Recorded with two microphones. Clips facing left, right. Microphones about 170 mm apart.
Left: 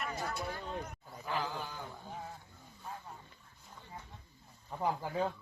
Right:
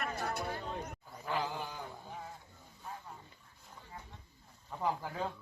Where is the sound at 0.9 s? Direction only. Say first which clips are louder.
Right 1 dB; 15° right (ahead or behind).